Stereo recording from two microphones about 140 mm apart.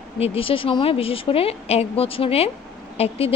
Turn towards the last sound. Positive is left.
turn(degrees=45)  # may be behind; listen again after turning